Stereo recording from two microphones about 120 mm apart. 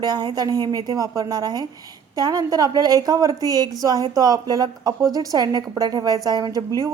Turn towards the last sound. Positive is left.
turn(degrees=-30)  # may be behind; listen again after turning